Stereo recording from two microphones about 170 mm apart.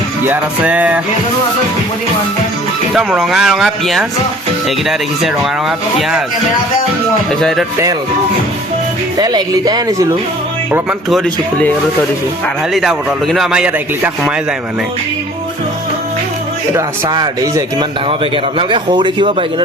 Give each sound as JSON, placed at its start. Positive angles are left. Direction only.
{"t": 0.3, "sound": "music", "side_deg": -10}
{"t": 2.9, "sound": "a man's voice", "side_deg": 0}
{"t": 9.1, "sound": "speech", "side_deg": -25}
{"t": 12.7, "sound": "a man's voice", "side_deg": 0}
{"t": 16.7, "sound": "speech", "side_deg": -20}